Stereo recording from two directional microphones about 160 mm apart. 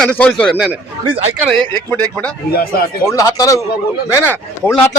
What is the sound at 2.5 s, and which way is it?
Speech, 70° left (ahead or behind).